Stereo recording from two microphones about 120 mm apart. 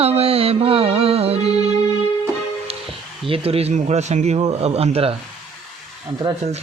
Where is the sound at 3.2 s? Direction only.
50° right (ahead or behind).